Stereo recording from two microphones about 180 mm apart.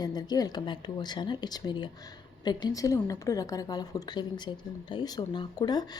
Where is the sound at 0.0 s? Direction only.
25° left (ahead or behind).